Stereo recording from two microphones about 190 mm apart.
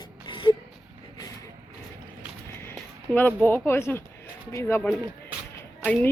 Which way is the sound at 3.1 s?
10° left (ahead or behind).